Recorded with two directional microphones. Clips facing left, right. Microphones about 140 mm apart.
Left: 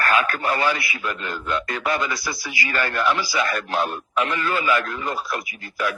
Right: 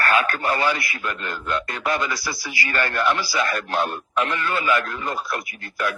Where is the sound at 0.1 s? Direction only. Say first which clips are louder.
Even; 35° right (ahead or behind).